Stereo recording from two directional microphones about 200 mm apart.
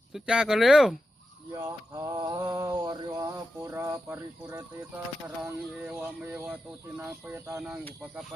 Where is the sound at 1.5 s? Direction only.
15° right (ahead or behind).